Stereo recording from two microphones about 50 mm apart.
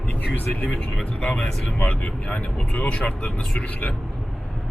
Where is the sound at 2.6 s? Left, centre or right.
Centre.